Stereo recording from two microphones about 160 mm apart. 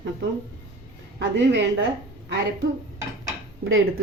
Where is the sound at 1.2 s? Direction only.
90° right.